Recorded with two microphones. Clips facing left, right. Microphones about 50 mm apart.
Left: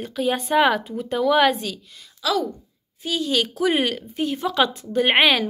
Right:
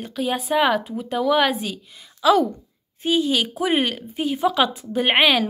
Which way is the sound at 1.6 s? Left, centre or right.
Centre.